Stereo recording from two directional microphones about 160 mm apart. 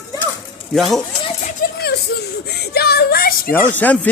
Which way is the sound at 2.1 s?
90° left.